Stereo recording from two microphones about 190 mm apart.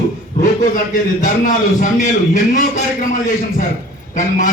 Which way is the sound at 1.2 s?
45° left (ahead or behind).